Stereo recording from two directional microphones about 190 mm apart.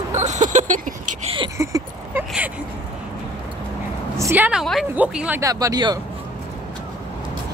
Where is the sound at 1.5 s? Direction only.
15° right (ahead or behind).